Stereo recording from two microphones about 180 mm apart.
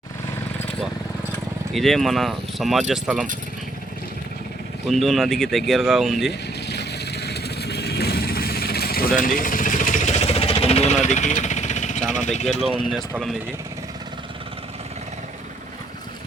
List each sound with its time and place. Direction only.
1.7 s speech: centre (ahead or behind)
4.9 s speech: centre (ahead or behind)
6.7 s vehicle: 65° left (ahead or behind); by 12.0 s 40° left (ahead or behind)
12.1 s speech: 40° left (ahead or behind)